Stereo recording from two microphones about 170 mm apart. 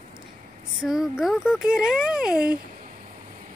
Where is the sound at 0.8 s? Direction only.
5° right (ahead or behind).